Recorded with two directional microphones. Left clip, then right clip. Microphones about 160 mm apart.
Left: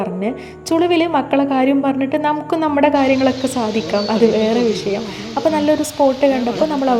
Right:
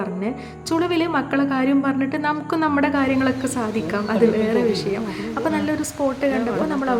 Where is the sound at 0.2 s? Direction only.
15° left (ahead or behind).